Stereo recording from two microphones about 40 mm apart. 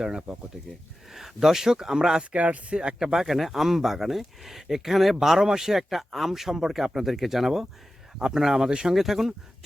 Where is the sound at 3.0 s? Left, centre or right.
Centre.